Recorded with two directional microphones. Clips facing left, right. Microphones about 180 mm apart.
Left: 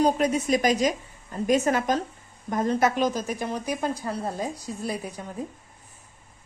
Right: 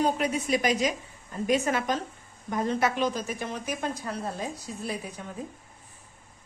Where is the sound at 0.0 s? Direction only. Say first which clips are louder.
Left 4 dB; 40° left (ahead or behind).